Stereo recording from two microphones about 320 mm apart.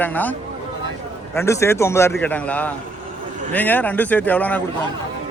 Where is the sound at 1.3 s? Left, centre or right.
Centre.